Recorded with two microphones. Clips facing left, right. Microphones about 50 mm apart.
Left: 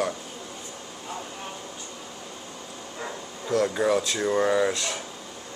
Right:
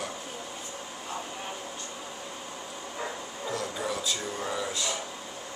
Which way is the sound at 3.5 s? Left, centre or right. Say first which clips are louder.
Left 11 dB; left.